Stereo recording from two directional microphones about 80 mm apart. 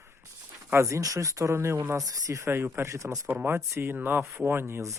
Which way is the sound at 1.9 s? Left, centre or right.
Right.